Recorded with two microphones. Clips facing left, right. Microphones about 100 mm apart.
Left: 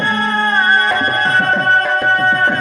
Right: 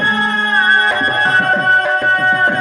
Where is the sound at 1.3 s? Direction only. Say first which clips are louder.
Even; 10° right (ahead or behind).